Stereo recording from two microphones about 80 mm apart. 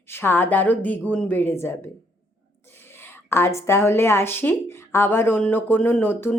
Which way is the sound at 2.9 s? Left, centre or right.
Left.